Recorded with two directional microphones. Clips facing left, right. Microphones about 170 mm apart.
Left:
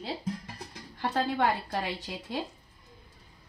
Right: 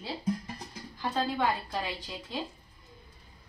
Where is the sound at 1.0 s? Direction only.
65° left (ahead or behind).